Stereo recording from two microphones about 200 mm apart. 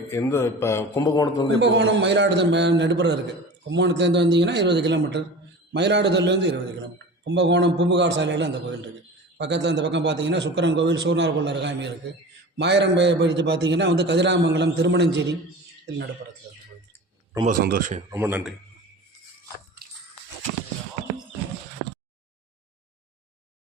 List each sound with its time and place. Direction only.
0.1 s a man's voice: 10° left (ahead or behind)
1.5 s a man's voice: 60° right (ahead or behind)
17.4 s a man's voice: 45° right (ahead or behind)
18.1 s a man's voice: 10° right (ahead or behind)